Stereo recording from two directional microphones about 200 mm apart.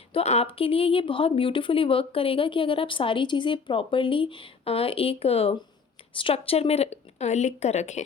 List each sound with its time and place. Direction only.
0.1 s speech: 30° left (ahead or behind)